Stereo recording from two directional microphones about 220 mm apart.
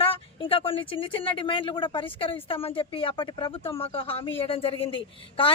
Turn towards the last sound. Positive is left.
turn(degrees=25)  # may be behind; listen again after turning